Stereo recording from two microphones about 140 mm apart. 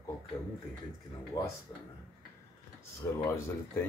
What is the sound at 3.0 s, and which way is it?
Speech, 20° left (ahead or behind).